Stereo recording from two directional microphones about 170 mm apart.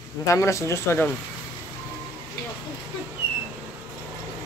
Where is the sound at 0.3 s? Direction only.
20° left (ahead or behind).